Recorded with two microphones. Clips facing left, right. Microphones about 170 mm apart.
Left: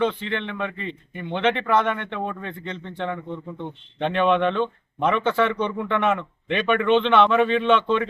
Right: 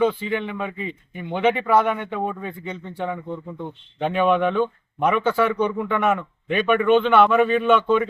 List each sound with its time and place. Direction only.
0.0 s speech: 5° right (ahead or behind)